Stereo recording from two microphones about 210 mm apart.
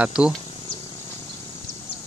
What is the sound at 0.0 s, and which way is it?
Speech, 5° right (ahead or behind).